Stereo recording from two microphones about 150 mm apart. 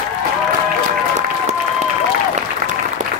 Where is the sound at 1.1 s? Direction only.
50° right (ahead or behind).